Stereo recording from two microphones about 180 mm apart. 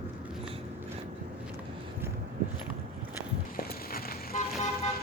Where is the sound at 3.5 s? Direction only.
55° left (ahead or behind).